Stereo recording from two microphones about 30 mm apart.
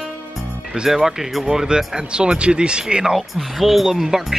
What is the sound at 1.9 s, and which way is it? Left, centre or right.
Speech, right.